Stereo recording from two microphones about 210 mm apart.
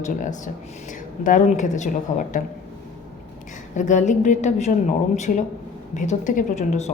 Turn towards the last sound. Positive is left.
turn(degrees=35)  # may be behind; listen again after turning